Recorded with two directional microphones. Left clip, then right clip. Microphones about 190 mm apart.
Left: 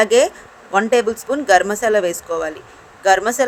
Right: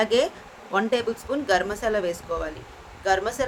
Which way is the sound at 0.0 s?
40° left (ahead or behind).